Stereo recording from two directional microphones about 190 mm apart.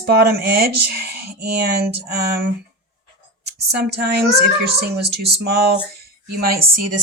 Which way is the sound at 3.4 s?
60° right (ahead or behind).